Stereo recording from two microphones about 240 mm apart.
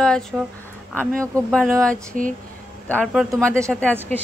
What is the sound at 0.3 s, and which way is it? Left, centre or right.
Speech, centre.